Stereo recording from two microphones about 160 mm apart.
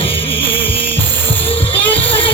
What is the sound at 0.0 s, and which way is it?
Music, 35° left (ahead or behind).